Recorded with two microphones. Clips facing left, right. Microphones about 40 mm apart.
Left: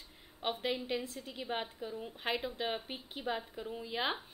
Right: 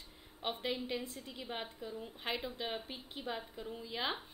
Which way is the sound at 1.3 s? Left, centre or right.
Centre.